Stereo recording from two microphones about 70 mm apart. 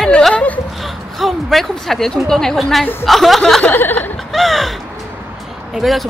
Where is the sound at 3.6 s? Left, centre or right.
Left.